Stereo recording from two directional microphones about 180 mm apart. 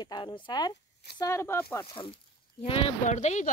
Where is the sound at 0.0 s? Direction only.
25° left (ahead or behind).